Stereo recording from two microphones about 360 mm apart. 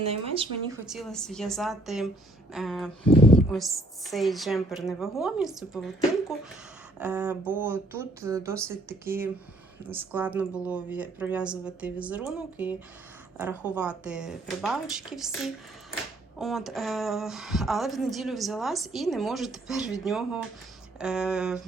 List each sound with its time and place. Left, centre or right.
0.0 s speech: centre
0.9 s a woman's voice: centre
3.1 s speech: centre
3.3 s a woman's voice: centre
7.0 s a woman's voice: centre